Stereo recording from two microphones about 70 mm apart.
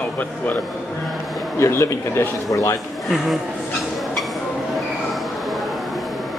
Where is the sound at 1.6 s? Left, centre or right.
Left.